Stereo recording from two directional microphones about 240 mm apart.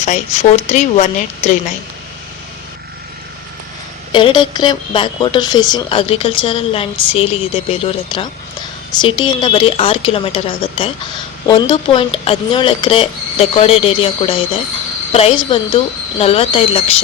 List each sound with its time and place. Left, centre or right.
0.0 s a woman's voice: left
4.1 s a woman's voice: centre